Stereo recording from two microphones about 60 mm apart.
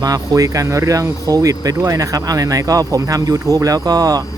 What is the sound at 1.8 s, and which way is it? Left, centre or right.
Speech, right.